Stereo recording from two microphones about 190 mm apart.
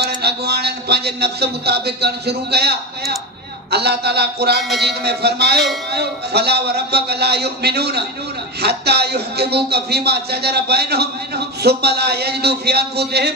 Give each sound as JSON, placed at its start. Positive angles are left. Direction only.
{"t": 0.0, "sound": "a man's voice", "side_deg": -60}
{"t": 4.6, "sound": "speech", "side_deg": 0}
{"t": 4.8, "sound": "a man's voice", "side_deg": -60}